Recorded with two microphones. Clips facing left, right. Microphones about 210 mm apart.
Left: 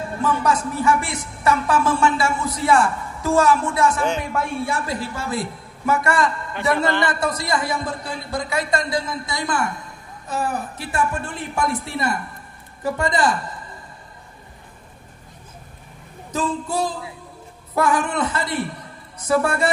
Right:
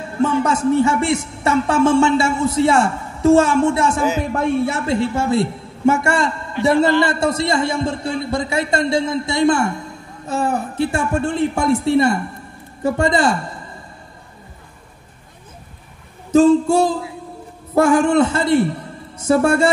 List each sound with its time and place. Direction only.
0.2 s a man's voice: 25° right (ahead or behind)
16.3 s a man's voice: 25° right (ahead or behind)